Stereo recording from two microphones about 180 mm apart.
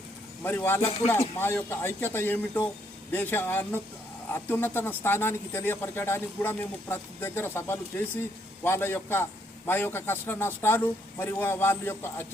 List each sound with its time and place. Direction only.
0.4 s speech: 10° left (ahead or behind)
0.8 s speech: 35° left (ahead or behind)
1.4 s speech: 10° left (ahead or behind)